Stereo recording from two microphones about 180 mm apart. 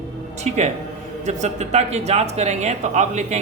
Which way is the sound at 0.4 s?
40° right (ahead or behind).